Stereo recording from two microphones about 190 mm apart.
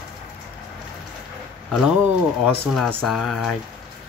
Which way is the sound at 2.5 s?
5° left (ahead or behind).